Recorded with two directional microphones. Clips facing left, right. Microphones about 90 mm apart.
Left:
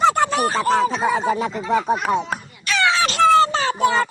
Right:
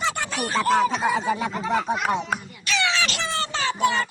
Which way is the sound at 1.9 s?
40° left (ahead or behind).